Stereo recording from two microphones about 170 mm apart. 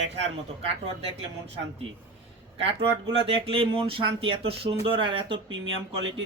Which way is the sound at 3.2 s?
35° right (ahead or behind).